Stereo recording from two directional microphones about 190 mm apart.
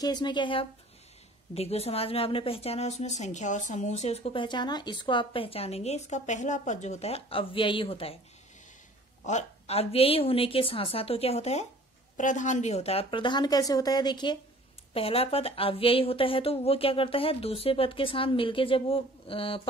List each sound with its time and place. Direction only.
0.0 s speech: 20° left (ahead or behind)
9.2 s speech: 40° left (ahead or behind)